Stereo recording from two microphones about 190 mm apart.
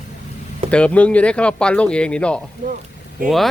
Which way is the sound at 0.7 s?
5° left (ahead or behind).